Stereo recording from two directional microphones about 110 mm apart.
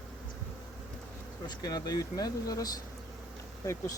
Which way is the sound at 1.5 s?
40° left (ahead or behind).